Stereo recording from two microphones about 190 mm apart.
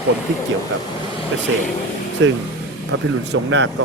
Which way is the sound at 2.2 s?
90° right.